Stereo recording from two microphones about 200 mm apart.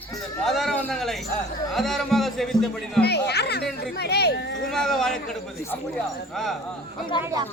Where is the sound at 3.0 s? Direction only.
55° left (ahead or behind).